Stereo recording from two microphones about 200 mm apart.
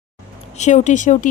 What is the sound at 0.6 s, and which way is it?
Speech, 35° left (ahead or behind).